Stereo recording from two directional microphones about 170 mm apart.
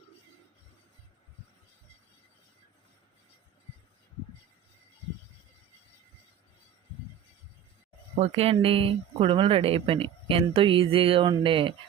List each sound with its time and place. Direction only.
8.1 s speech: 35° right (ahead or behind)